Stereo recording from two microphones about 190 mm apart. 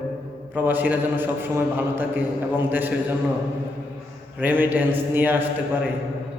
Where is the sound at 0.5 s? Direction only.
10° right (ahead or behind).